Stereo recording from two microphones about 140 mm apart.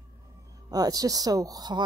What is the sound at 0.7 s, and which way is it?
Speech, 25° right (ahead or behind).